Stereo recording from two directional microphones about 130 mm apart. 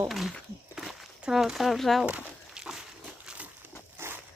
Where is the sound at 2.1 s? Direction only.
10° right (ahead or behind).